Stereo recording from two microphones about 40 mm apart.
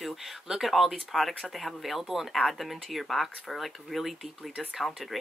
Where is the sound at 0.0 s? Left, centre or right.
Centre.